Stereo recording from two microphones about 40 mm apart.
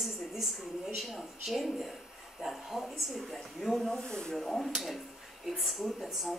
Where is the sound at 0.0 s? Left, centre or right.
Centre.